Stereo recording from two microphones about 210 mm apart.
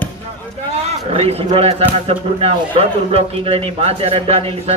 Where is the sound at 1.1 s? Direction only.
30° right (ahead or behind).